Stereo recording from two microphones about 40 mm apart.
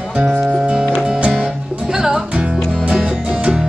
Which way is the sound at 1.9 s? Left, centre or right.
Centre.